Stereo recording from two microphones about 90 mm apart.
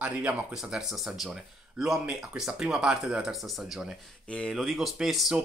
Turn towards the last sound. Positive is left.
turn(degrees=-5)  # may be behind; listen again after turning